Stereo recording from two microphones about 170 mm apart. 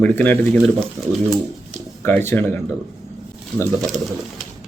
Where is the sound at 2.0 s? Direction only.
15° left (ahead or behind).